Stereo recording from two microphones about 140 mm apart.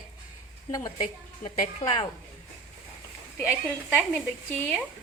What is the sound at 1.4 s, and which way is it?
Speech, 45° left (ahead or behind).